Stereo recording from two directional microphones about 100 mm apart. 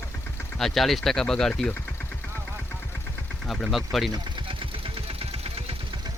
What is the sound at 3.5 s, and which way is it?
Speech, centre (ahead or behind).